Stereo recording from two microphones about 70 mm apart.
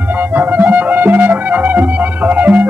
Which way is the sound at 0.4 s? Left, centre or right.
Right.